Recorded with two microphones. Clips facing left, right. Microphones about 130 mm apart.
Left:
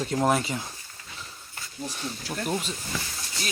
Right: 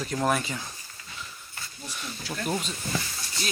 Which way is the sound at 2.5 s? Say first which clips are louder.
Even; centre (ahead or behind).